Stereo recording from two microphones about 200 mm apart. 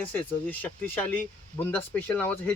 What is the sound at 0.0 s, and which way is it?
Speech, 10° left (ahead or behind).